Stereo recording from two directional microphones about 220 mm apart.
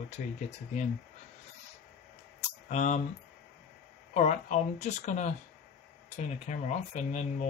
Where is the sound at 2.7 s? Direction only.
35° left (ahead or behind).